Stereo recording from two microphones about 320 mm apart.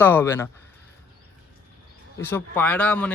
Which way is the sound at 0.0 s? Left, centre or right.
Centre.